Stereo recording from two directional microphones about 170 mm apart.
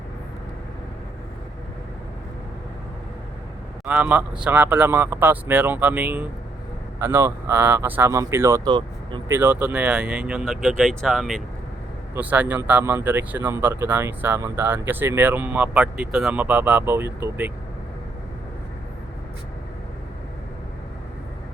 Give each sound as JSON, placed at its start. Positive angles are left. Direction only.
{"t": 3.8, "sound": "speech", "side_deg": -10}
{"t": 9.3, "sound": "speech", "side_deg": -10}